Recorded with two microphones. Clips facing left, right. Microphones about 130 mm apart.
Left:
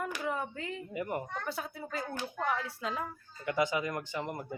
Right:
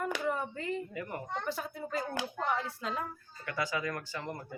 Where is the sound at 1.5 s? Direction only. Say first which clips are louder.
Right 2 dB; centre (ahead or behind).